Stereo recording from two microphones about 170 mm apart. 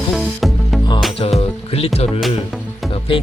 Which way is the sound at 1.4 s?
35° left (ahead or behind).